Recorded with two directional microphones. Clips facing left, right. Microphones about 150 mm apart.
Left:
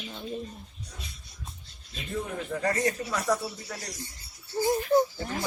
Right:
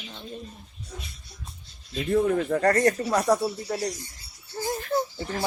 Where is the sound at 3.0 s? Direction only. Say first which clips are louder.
Right 6 dB; 35° right (ahead or behind).